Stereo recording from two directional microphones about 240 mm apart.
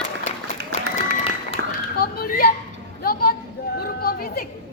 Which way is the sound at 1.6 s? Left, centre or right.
Right.